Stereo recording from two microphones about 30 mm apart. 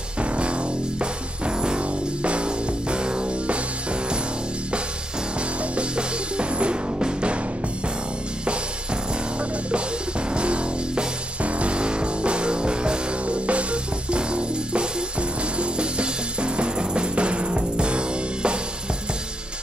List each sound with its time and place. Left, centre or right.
0.2 s music: right
0.9 s music: right
5.6 s music: right
7.0 s music: right
10.3 s music: right
13.5 s music: right